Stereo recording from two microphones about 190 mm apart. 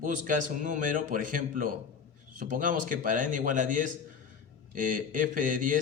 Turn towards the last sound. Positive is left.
turn(degrees=-45)  # may be behind; listen again after turning